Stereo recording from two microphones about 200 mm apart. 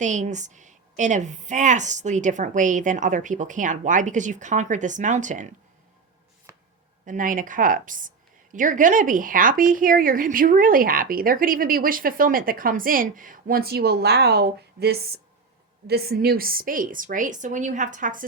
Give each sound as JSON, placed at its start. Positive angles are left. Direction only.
{"t": 0.0, "sound": "a woman's voice", "side_deg": -40}
{"t": 7.0, "sound": "a woman's voice", "side_deg": -40}